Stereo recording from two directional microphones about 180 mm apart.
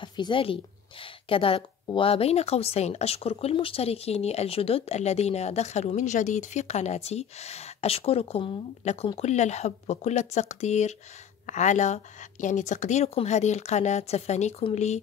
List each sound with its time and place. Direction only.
0.0 s a woman's voice: 25° left (ahead or behind)